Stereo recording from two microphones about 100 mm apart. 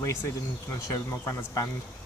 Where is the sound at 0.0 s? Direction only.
30° left (ahead or behind).